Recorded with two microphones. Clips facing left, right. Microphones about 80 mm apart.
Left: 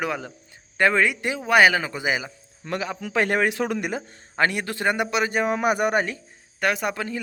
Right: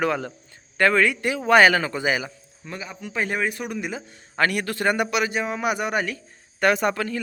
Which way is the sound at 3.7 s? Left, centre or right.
Left.